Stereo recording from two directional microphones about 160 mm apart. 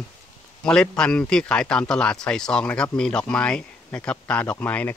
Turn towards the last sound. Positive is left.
turn(degrees=10)  # may be behind; listen again after turning